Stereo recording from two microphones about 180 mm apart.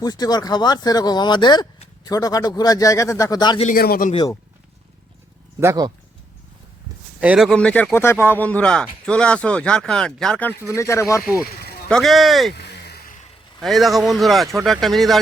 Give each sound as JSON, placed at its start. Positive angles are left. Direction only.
{"t": 0.0, "sound": "speech", "side_deg": 20}
{"t": 3.8, "sound": "speech", "side_deg": 55}
{"t": 4.1, "sound": "speech", "side_deg": 25}
{"t": 5.5, "sound": "speech", "side_deg": -20}
{"t": 7.2, "sound": "speech", "side_deg": -5}
{"t": 10.8, "sound": "speech", "side_deg": 15}
{"t": 11.4, "sound": "snake", "side_deg": 60}
{"t": 11.9, "sound": "speech", "side_deg": 0}
{"t": 12.5, "sound": "a sound", "side_deg": 65}
{"t": 13.6, "sound": "speech", "side_deg": 0}